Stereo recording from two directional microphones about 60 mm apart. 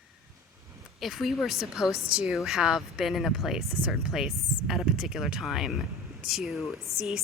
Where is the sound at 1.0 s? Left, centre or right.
Centre.